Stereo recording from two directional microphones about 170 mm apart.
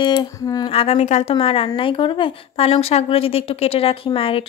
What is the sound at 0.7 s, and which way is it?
A woman's voice, 35° left (ahead or behind).